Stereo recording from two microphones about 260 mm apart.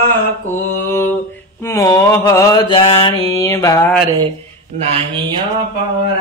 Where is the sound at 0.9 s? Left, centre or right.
Centre.